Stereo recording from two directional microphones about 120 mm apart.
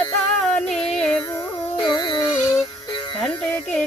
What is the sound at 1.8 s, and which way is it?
Music, 40° left (ahead or behind).